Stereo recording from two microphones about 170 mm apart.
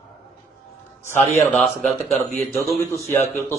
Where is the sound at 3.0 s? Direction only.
15° left (ahead or behind).